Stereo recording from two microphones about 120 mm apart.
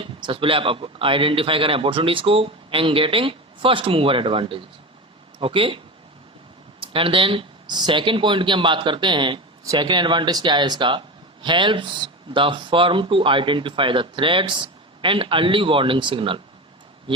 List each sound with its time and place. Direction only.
0.0 s speech: 45° right (ahead or behind)
6.8 s speech: 50° right (ahead or behind)